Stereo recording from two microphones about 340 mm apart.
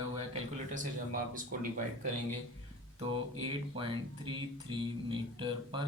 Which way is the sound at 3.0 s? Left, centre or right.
Centre.